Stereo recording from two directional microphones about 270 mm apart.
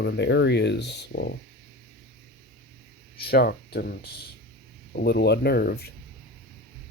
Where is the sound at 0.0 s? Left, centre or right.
Left.